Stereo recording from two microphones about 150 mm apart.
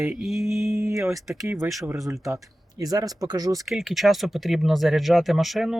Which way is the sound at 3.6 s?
Centre (ahead or behind).